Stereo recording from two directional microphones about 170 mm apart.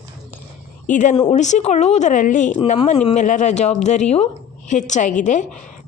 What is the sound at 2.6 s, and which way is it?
Speech, 35° left (ahead or behind).